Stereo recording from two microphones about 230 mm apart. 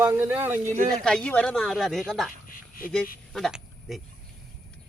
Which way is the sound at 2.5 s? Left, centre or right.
Left.